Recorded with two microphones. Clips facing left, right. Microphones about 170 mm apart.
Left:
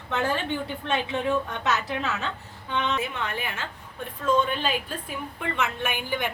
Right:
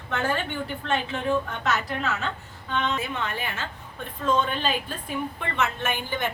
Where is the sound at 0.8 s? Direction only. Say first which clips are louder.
Right 1 dB; 15° left (ahead or behind).